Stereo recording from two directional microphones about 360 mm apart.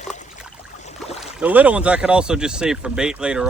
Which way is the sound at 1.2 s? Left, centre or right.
Centre.